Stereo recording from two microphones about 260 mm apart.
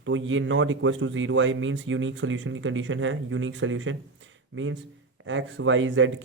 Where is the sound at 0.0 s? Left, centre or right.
Right.